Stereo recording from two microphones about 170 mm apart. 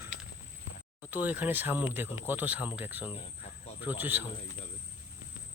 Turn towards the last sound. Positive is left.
turn(degrees=-10)  # may be behind; listen again after turning